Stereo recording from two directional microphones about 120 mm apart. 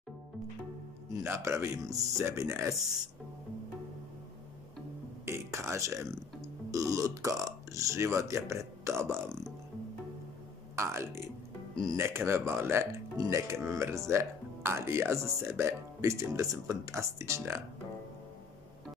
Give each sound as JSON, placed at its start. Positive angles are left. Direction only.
{"t": 1.2, "sound": "speech", "side_deg": -20}
{"t": 5.2, "sound": "a sound", "side_deg": -25}
{"t": 6.7, "sound": "speech", "side_deg": -30}
{"t": 10.8, "sound": "speech", "side_deg": -20}